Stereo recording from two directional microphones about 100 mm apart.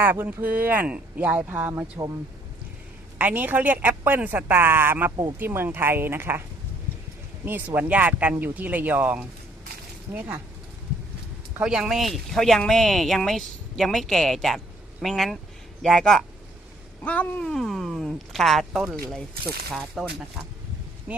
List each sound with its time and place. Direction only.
0.0 s speech: 20° right (ahead or behind)
3.2 s a woman's voice: 15° right (ahead or behind)
7.4 s a woman's voice: 20° right (ahead or behind)
11.6 s speech: 5° right (ahead or behind)
17.0 s a sound: 15° left (ahead or behind)
17.4 s speech: 5° left (ahead or behind)
21.1 s speech: 15° right (ahead or behind)